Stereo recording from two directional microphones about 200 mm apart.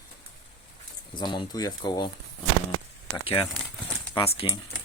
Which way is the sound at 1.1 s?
25° left (ahead or behind).